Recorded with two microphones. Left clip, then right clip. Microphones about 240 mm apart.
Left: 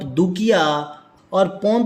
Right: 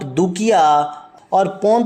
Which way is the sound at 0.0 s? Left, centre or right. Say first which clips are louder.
Right 2 dB; centre.